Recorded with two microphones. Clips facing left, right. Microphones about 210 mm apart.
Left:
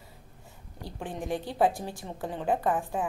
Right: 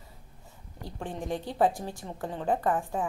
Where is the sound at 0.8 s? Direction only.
10° left (ahead or behind).